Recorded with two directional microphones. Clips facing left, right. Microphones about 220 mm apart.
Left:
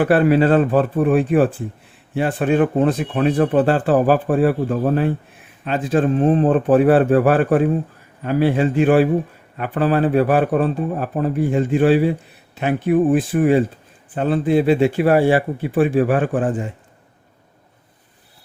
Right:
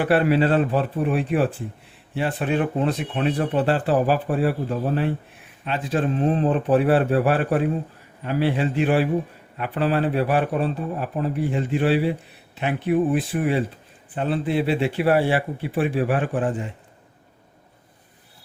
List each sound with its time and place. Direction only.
0.0 s speech: 45° left (ahead or behind)